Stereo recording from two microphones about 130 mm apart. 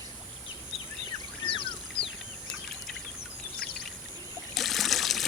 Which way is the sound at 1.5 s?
40° left (ahead or behind).